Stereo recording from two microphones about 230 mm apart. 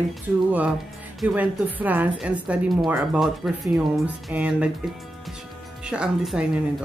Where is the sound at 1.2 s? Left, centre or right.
Centre.